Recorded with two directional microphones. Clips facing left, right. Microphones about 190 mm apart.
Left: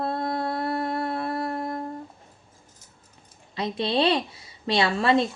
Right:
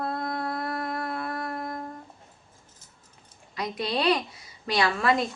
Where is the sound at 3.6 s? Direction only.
25° left (ahead or behind).